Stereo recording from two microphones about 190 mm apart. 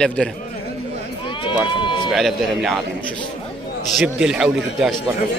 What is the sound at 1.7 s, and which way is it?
Run, 25° left (ahead or behind).